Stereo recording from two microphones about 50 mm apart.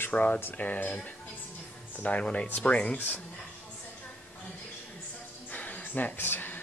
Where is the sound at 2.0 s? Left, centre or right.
Left.